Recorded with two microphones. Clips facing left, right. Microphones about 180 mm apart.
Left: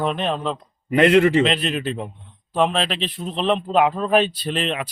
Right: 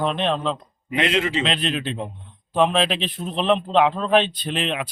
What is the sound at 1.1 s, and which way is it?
Speech, 60° left (ahead or behind).